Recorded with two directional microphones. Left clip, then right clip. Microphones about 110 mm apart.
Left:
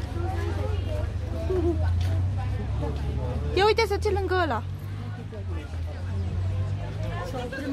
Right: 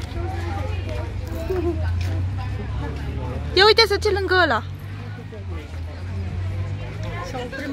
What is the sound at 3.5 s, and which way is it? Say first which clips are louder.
Speech: right 7 dB; 20° right (ahead or behind).